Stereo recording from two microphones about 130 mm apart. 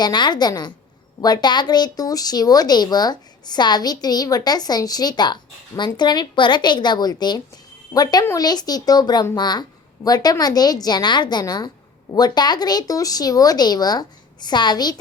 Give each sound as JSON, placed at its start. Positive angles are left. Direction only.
{"t": 0.0, "sound": "speech", "side_deg": 35}